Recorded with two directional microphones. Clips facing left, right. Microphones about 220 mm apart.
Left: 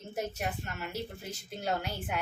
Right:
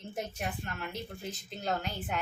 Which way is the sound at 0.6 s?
5° left (ahead or behind).